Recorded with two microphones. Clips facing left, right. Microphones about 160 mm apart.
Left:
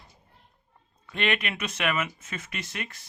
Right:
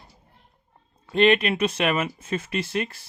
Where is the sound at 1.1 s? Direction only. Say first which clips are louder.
Right 10 dB; 30° right (ahead or behind).